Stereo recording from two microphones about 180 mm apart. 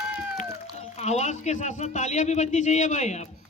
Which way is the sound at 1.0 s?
40° left (ahead or behind).